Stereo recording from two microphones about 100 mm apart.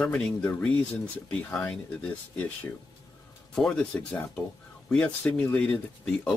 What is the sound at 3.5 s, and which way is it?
Speech, 5° left (ahead or behind).